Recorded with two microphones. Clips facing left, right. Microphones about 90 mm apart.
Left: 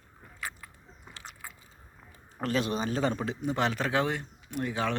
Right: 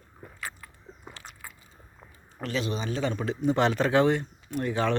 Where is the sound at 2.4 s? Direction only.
45° left (ahead or behind).